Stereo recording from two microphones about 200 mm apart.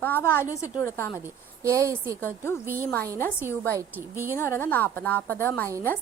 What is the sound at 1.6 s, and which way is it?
Speech, 15° right (ahead or behind).